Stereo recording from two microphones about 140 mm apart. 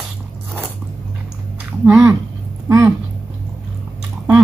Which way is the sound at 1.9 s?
20° right (ahead or behind).